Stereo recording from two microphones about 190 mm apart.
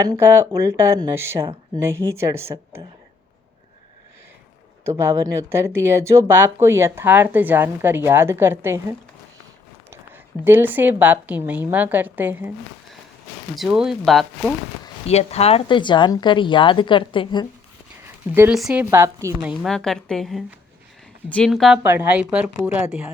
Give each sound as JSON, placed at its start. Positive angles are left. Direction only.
{"t": 0.0, "sound": "speech", "side_deg": -15}
{"t": 4.9, "sound": "speech", "side_deg": -15}
{"t": 10.4, "sound": "speech", "side_deg": -10}
{"t": 13.6, "sound": "speech", "side_deg": -5}
{"t": 15.0, "sound": "speech", "side_deg": 35}
{"t": 18.0, "sound": "a sound", "side_deg": -10}
{"t": 18.5, "sound": "speech", "side_deg": -5}
{"t": 19.6, "sound": "speech", "side_deg": 0}
{"t": 21.8, "sound": "speech", "side_deg": -10}